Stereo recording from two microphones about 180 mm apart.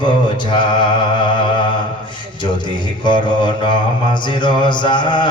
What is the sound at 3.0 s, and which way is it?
Mantra, 25° left (ahead or behind).